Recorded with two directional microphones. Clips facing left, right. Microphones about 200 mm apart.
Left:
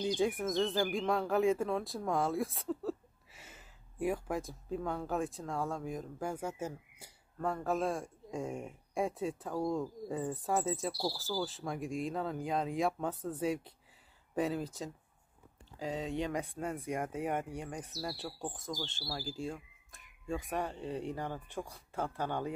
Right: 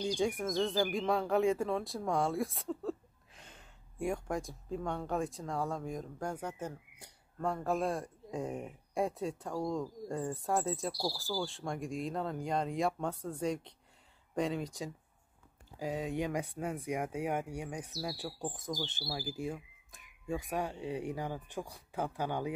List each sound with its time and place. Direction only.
0.0 s speech: 5° left (ahead or behind)
15.8 s speech: 10° right (ahead or behind)
16.3 s speech: centre (ahead or behind)
17.9 s speech: 15° right (ahead or behind)
20.4 s speech: centre (ahead or behind)